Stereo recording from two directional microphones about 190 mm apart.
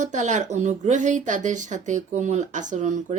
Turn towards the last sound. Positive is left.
turn(degrees=-40)  # may be behind; listen again after turning